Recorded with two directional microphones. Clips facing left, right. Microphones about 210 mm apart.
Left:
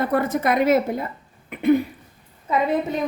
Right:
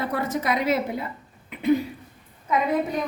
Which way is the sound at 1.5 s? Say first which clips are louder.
Left 3 dB; 55° left (ahead or behind).